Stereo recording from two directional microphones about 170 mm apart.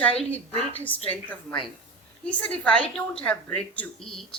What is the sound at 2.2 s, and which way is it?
A woman's voice, 5° left (ahead or behind).